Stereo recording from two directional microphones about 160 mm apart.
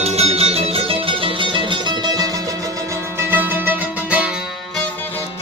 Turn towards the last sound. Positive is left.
turn(degrees=-10)  # may be behind; listen again after turning